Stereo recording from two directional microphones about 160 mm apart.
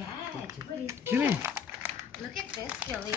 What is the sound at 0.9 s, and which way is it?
Speech, 15° right (ahead or behind).